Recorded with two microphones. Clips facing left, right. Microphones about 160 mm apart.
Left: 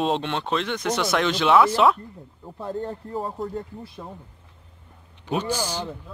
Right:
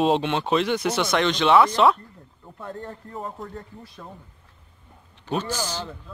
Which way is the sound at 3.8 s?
15° left (ahead or behind).